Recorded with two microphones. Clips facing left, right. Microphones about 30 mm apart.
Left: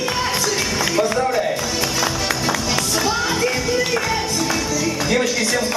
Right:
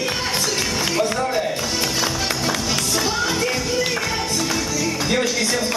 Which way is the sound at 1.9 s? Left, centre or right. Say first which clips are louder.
Left 1 dB; centre.